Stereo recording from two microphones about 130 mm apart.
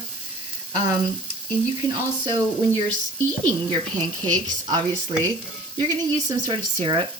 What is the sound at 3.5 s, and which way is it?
Speech, 30° right (ahead or behind).